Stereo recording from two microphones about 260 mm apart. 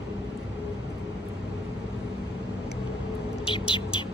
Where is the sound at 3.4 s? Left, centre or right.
Centre.